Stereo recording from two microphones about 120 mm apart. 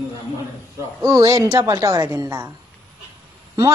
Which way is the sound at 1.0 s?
30° right (ahead or behind).